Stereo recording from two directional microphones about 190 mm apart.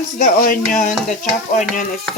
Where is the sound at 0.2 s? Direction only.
45° left (ahead or behind).